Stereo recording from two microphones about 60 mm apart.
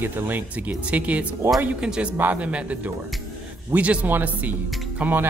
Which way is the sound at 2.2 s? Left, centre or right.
Right.